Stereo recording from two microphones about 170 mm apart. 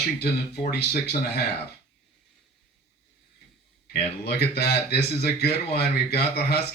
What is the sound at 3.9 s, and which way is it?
Speech, 70° left (ahead or behind).